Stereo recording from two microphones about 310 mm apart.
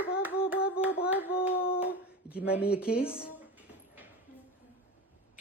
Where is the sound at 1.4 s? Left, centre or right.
Centre.